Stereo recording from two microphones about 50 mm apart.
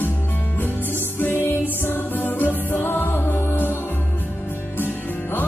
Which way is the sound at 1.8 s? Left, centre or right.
Left.